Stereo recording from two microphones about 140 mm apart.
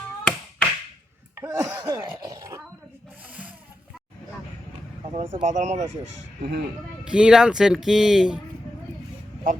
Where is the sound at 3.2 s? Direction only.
10° right (ahead or behind).